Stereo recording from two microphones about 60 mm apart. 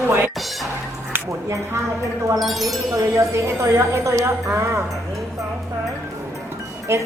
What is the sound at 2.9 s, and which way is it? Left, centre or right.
A woman's voice, right.